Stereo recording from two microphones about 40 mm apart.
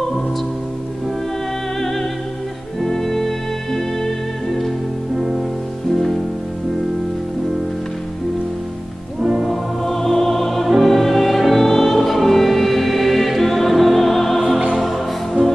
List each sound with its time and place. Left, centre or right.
2.8 s music: centre
9.2 s music: centre
9.8 s music: centre